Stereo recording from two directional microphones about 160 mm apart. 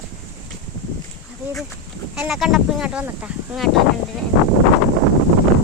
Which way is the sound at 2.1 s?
Centre (ahead or behind).